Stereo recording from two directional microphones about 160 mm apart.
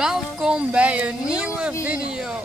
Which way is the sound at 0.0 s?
5° right (ahead or behind).